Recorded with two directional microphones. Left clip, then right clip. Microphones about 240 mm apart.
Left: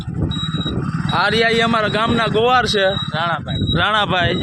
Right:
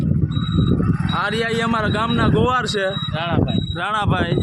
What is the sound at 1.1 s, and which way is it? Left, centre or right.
Speech, centre.